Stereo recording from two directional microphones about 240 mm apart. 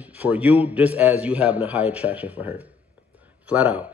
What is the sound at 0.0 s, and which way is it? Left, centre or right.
A man's voice, centre.